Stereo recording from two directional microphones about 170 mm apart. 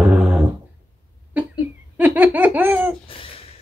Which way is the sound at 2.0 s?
10° right (ahead or behind).